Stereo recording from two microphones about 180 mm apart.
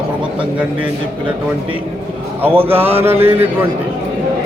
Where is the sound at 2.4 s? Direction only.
10° right (ahead or behind).